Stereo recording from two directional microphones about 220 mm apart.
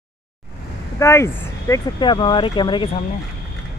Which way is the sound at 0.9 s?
15° left (ahead or behind).